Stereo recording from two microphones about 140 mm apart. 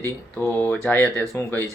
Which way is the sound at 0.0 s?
15° left (ahead or behind).